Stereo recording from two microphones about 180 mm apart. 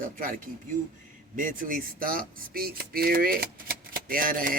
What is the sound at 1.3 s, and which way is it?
A man's voice, 50° right (ahead or behind).